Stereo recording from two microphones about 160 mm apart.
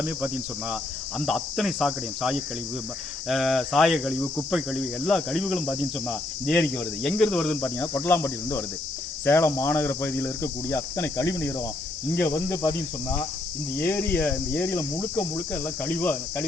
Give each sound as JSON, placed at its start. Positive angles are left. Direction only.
{"t": 1.2, "sound": "cricket", "side_deg": 0}
{"t": 6.4, "sound": "speech", "side_deg": 5}
{"t": 13.7, "sound": "speech", "side_deg": 10}